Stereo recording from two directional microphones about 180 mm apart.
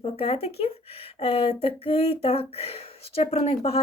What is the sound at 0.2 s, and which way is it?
Speech, 35° left (ahead or behind).